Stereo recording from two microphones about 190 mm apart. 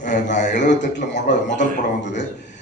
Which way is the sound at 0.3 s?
65° left (ahead or behind).